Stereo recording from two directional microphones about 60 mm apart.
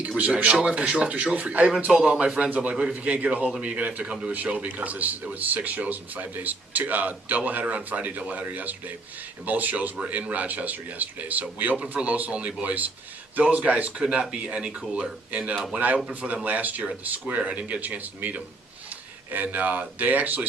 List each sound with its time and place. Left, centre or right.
0.5 s speech: centre